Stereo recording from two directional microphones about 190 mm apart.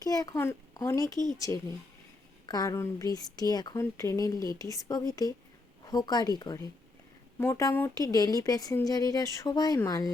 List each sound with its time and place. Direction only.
0.0 s speech: 20° left (ahead or behind)
2.5 s speech: 20° left (ahead or behind)